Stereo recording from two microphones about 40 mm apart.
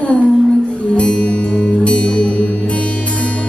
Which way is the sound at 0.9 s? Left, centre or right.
Left.